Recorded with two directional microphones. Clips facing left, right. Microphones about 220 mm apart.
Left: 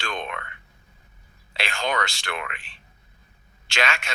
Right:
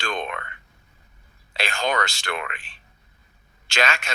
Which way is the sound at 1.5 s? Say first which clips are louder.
Right 2 dB; 40° right (ahead or behind).